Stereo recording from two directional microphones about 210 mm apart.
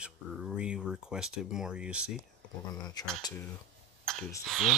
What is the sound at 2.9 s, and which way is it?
Speech, 20° left (ahead or behind).